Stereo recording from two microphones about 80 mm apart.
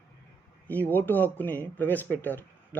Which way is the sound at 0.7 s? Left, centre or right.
Left.